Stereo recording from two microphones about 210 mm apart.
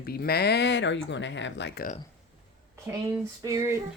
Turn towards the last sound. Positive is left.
turn(degrees=-15)  # may be behind; listen again after turning